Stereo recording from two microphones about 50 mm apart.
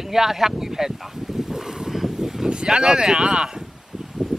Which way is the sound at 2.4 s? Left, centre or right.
Centre.